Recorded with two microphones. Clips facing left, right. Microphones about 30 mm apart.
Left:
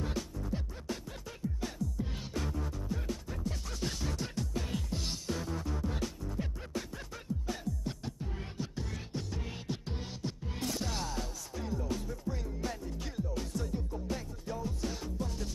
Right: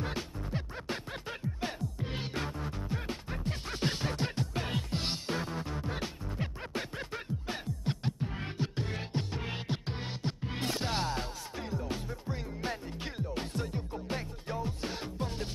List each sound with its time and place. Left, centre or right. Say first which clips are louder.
0.0 s music: right 1 dB; right